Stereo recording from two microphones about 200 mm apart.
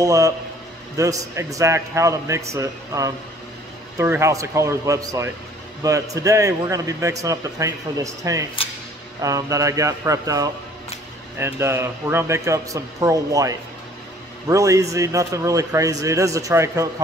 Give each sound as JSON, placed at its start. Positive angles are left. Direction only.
{"t": 0.0, "sound": "a man's voice", "side_deg": -15}